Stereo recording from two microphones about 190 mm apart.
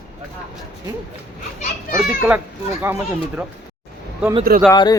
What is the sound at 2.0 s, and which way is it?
Speech, 5° right (ahead or behind).